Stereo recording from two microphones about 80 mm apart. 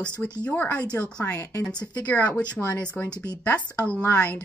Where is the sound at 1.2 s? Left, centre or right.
Left.